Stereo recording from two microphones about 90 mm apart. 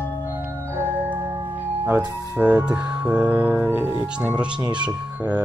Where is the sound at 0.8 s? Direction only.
20° right (ahead or behind).